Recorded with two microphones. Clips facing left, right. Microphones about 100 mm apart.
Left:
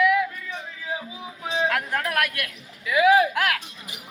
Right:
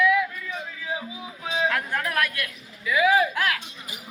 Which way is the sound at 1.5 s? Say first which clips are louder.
Left 1 dB; 45° left (ahead or behind).